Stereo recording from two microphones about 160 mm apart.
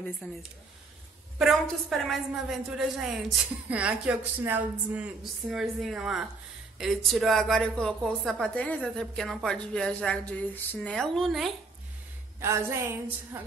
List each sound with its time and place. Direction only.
0.2 s speech: 10° left (ahead or behind)
1.4 s a woman's voice: centre (ahead or behind)
12.4 s a woman's voice: 15° right (ahead or behind)